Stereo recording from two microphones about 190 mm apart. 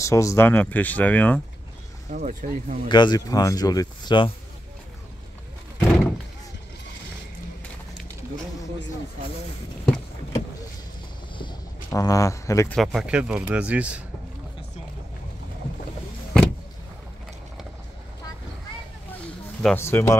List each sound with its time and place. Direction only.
0.0 s speech: 15° left (ahead or behind)
2.1 s speech: 50° right (ahead or behind)
2.9 s speech: 20° left (ahead or behind)
5.8 s slam: 5° left (ahead or behind)
11.3 s a sound: 20° left (ahead or behind)
12.7 s speech: centre (ahead or behind)
19.6 s speech: 10° left (ahead or behind)